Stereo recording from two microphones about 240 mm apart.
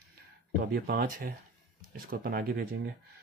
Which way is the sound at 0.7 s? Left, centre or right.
Right.